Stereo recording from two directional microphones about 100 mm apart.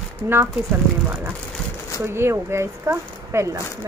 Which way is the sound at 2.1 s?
25° right (ahead or behind).